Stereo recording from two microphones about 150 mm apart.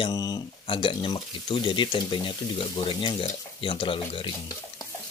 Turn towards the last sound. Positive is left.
turn(degrees=35)  # may be behind; listen again after turning